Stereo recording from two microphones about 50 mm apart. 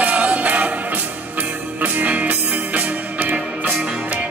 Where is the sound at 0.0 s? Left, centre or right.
Right.